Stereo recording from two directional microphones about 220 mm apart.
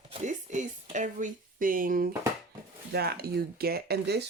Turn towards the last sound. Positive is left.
turn(degrees=-45)  # may be behind; listen again after turning